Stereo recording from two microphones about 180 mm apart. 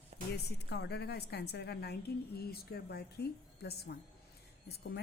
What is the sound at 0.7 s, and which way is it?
A woman's voice, 65° left (ahead or behind).